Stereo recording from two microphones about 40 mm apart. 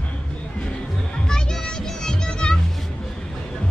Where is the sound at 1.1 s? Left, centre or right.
Centre.